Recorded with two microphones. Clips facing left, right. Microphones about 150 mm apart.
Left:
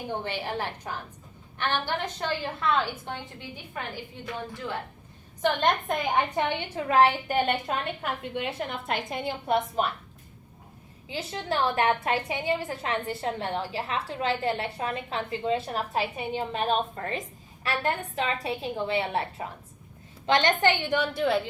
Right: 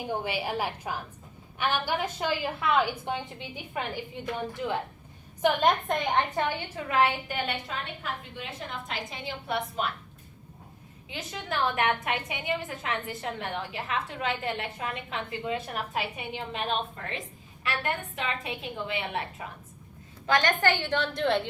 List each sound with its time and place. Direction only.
0.1 s a woman's voice: 10° right (ahead or behind)
5.4 s a woman's voice: 5° right (ahead or behind)
6.5 s a woman's voice: 30° left (ahead or behind)
11.1 s a woman's voice: 30° left (ahead or behind); by 21.4 s 5° left (ahead or behind)